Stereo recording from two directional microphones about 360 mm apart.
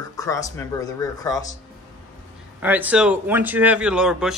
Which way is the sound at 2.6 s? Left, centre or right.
Centre.